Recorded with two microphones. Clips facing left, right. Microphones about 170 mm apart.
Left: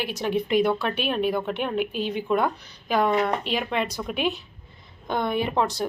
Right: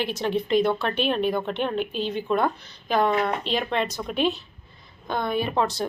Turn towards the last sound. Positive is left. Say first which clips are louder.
# even
turn(degrees=15)  # may be behind; listen again after turning